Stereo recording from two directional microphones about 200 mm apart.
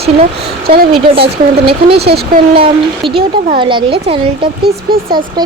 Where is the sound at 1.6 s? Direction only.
30° right (ahead or behind).